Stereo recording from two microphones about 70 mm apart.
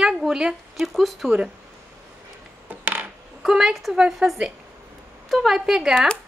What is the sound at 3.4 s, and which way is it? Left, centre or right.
A woman's voice, centre.